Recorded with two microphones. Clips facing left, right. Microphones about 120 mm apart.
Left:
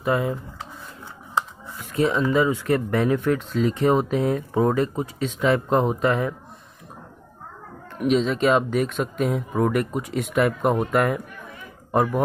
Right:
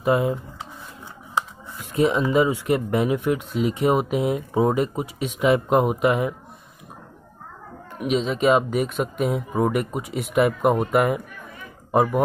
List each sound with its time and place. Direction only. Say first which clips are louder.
0.0 s speech: right 2 dB; 20° right (ahead or behind)
7.9 s speech: left 2 dB; 5° right (ahead or behind)